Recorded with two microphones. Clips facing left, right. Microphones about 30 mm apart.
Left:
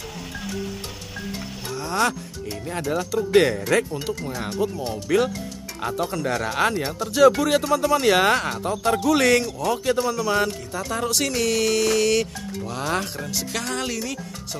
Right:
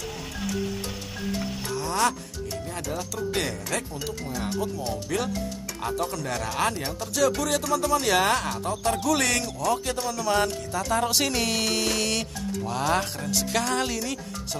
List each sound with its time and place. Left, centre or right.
1.8 s speech: centre
2.5 s speech: left
3.7 s speech: left
9.2 s speech: centre